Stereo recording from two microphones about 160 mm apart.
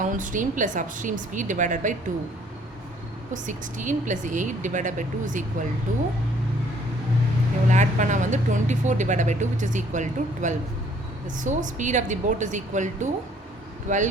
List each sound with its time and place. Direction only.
0.0 s speech: 55° right (ahead or behind)
3.3 s speech: 50° right (ahead or behind)
7.7 s speech: 50° right (ahead or behind)